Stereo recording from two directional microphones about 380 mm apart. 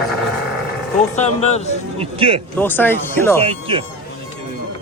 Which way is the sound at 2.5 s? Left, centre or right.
Centre.